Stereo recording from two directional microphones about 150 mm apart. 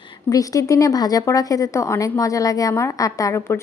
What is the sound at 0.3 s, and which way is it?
A woman's voice, 25° left (ahead or behind).